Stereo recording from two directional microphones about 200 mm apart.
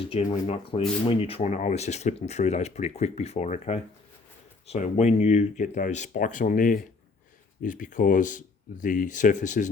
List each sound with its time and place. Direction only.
0.0 s speech: 30° left (ahead or behind)